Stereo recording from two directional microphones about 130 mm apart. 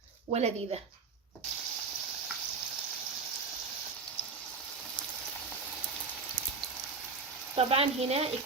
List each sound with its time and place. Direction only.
0.3 s speech: 55° right (ahead or behind)
7.5 s speech: 50° right (ahead or behind)